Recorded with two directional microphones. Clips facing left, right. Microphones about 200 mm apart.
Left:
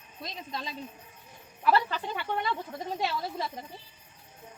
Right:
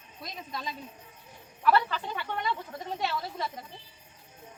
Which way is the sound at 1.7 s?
35° left (ahead or behind).